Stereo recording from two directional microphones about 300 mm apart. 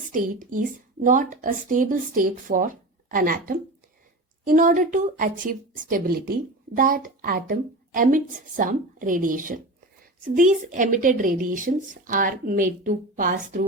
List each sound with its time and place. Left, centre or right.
0.0 s a woman's voice: right